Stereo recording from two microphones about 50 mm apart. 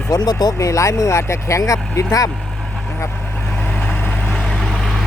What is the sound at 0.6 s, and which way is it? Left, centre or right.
Speech, left.